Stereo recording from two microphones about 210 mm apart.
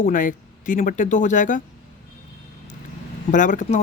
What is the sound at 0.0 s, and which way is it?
Speech, 40° left (ahead or behind).